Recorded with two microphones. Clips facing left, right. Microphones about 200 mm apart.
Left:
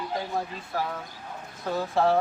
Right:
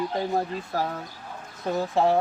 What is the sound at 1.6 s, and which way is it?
Speech, 20° right (ahead or behind).